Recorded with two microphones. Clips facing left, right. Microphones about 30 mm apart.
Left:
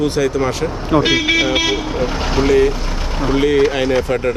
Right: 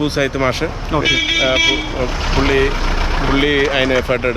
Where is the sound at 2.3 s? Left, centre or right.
Right.